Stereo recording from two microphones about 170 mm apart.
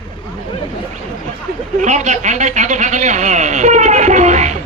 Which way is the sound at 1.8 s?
45° right (ahead or behind).